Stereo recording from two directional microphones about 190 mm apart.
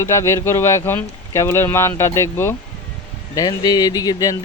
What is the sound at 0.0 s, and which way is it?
Speech, 15° left (ahead or behind).